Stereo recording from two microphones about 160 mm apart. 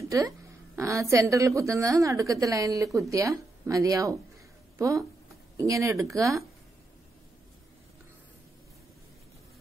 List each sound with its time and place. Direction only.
0.7 s a woman's voice: 20° right (ahead or behind)